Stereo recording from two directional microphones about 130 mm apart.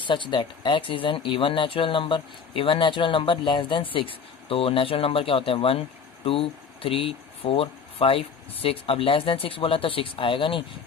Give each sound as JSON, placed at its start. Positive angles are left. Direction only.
{"t": 0.0, "sound": "speech", "side_deg": 40}